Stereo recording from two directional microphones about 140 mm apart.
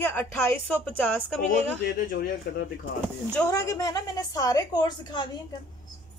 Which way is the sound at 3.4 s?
25° left (ahead or behind).